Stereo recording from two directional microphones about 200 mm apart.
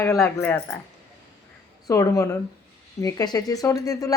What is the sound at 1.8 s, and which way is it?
Speech, 15° left (ahead or behind).